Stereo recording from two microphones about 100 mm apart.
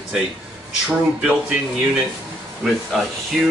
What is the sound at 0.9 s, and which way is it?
Speech, 15° right (ahead or behind).